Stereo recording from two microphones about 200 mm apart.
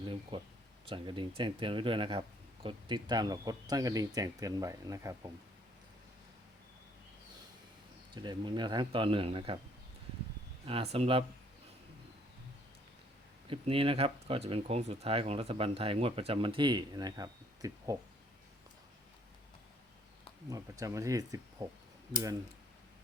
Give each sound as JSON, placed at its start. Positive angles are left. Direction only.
{"t": 0.0, "sound": "speech", "side_deg": -25}
{"t": 8.1, "sound": "speech", "side_deg": -20}
{"t": 10.7, "sound": "speech", "side_deg": -30}
{"t": 13.5, "sound": "speech", "side_deg": -25}
{"t": 20.5, "sound": "speech", "side_deg": -15}